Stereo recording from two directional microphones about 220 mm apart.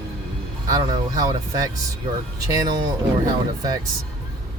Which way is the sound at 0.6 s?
15° right (ahead or behind).